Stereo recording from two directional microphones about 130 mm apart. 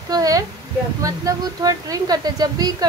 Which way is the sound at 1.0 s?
25° right (ahead or behind).